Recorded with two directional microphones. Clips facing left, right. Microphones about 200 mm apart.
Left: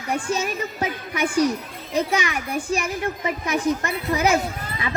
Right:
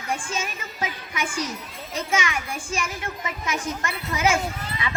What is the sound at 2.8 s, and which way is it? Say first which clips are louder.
A child's voice: left 7 dB; 35° left (ahead or behind).